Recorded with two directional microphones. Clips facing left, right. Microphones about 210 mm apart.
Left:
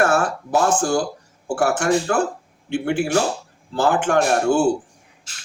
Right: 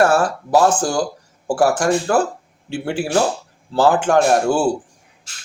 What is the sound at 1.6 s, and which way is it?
Speech, 35° right (ahead or behind).